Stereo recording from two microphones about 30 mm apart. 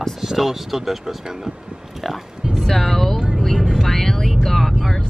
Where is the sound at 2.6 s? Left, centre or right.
Centre.